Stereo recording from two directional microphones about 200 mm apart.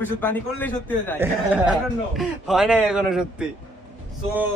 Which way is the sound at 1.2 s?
5° right (ahead or behind).